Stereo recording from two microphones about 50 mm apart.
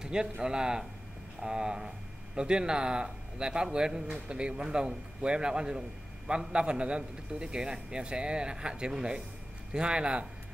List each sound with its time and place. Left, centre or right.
0.0 s a man's voice: centre